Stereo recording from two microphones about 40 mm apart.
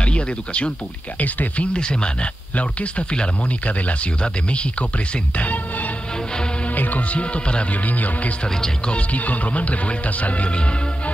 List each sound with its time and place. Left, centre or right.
0.0 s speech: left
1.2 s speech: left
1.7 s speech: left
5.4 s music: left
7.7 s speech: left
8.5 s speech: centre
8.9 s speech: left